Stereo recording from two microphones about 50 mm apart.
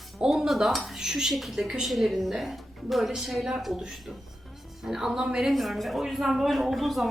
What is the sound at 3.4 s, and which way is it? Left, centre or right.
Speech, centre.